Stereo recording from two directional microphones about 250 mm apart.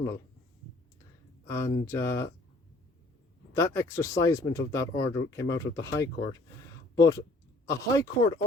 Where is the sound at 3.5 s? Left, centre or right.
Centre.